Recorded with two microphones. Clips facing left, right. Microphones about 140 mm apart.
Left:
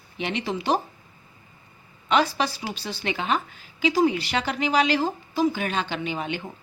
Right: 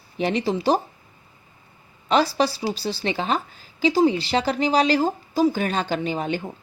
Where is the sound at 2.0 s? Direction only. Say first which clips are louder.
Right 3 dB; 35° right (ahead or behind).